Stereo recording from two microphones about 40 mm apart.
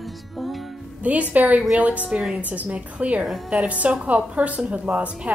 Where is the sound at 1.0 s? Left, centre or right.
Right.